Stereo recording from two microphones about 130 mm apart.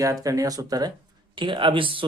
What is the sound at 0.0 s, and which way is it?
Speech, 25° right (ahead or behind).